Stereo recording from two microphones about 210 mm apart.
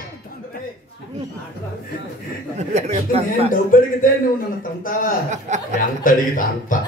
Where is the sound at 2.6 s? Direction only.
30° right (ahead or behind).